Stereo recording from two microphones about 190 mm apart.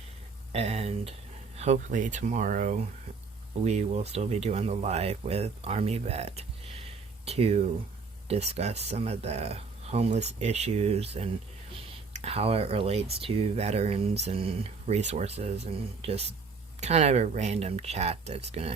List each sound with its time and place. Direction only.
0.5 s speech: 35° right (ahead or behind)